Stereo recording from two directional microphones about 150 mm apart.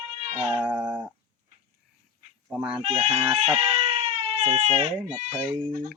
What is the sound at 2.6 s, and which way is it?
Speech, 5° right (ahead or behind).